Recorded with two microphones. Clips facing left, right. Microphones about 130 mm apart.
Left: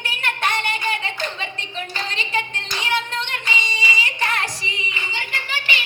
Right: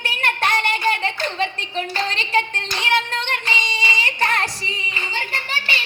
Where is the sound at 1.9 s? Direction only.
45° right (ahead or behind).